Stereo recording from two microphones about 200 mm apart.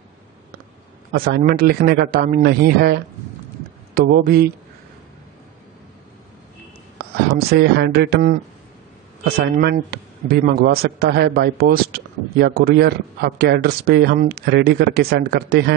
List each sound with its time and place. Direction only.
1.1 s a man's voice: 50° right (ahead or behind)
7.3 s a man's voice: 55° right (ahead or behind)